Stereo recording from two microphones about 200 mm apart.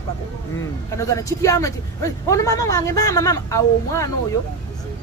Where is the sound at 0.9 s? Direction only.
15° left (ahead or behind).